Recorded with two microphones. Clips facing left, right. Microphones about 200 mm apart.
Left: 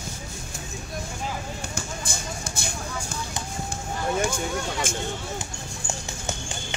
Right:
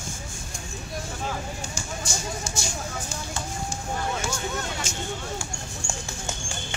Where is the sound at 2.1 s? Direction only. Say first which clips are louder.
Right 2 dB; 55° left (ahead or behind).